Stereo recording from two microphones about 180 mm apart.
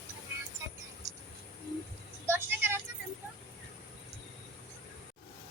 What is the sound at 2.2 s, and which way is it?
Music, 15° right (ahead or behind).